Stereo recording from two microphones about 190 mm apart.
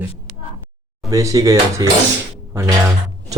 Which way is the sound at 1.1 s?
15° right (ahead or behind).